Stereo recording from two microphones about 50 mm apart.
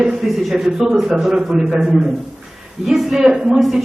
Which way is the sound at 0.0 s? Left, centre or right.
Centre.